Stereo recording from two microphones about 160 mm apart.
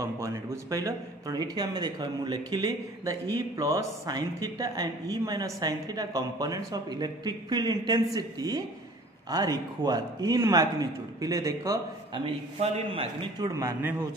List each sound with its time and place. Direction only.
0.0 s speech: 20° right (ahead or behind)
12.5 s a man's voice: 40° right (ahead or behind)
13.6 s speech: 15° right (ahead or behind)